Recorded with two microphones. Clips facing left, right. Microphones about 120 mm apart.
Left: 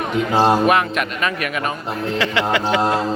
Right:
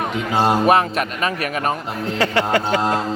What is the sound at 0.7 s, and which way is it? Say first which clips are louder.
A man's voice: right 1 dB; 35° right (ahead or behind).